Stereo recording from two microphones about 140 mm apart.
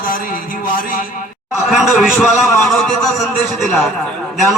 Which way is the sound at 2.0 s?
5° right (ahead or behind).